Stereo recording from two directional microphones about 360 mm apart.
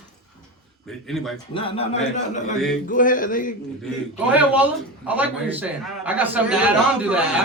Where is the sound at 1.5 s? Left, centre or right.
Centre.